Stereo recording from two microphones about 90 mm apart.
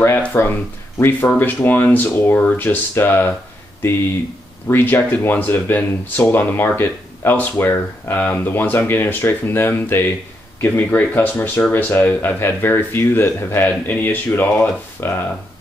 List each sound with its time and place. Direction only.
0.3 s speech: 25° left (ahead or behind)
4.6 s speech: 25° left (ahead or behind)